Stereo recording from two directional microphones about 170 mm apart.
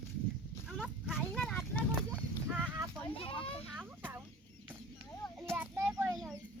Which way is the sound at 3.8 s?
10° right (ahead or behind).